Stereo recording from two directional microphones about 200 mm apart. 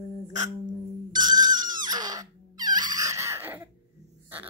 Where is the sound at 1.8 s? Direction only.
20° right (ahead or behind).